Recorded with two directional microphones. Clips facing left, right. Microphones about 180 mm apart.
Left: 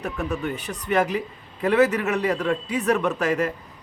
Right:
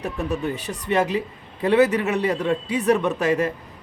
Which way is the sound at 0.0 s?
35° right (ahead or behind).